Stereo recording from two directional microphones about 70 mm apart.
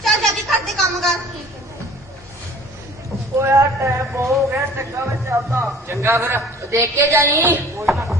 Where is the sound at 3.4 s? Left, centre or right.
Right.